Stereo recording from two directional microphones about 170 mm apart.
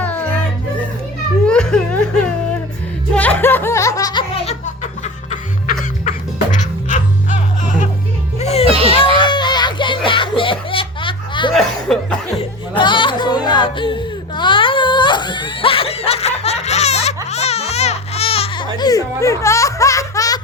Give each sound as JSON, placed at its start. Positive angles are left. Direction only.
{"t": 0.0, "sound": "music", "side_deg": 10}
{"t": 1.5, "sound": "laughter", "side_deg": 5}
{"t": 3.2, "sound": "music", "side_deg": 10}
{"t": 8.6, "sound": "children playing", "side_deg": -35}
{"t": 9.2, "sound": "music", "side_deg": 25}
{"t": 11.5, "sound": "chuckle", "side_deg": 5}
{"t": 12.4, "sound": "music", "side_deg": 30}
{"t": 17.2, "sound": "baby cry", "side_deg": 40}